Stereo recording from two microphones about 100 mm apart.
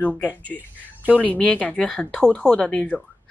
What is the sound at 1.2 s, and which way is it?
Speech, 15° left (ahead or behind).